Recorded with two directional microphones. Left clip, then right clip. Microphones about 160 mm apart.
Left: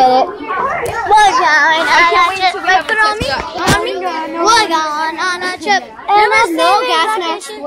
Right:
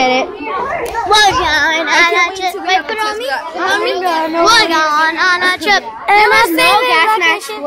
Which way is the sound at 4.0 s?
30° right (ahead or behind).